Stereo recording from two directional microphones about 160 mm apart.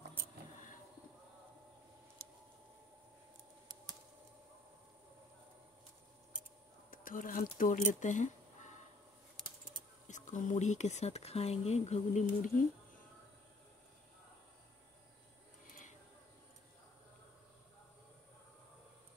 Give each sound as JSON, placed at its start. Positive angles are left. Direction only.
{"t": 6.9, "sound": "speech", "side_deg": 60}
{"t": 10.0, "sound": "speech", "side_deg": 50}